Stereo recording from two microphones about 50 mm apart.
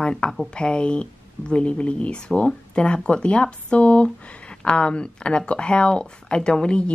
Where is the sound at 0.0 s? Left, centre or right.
Centre.